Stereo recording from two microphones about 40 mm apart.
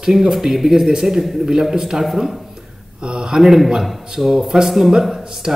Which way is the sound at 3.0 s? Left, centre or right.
Right.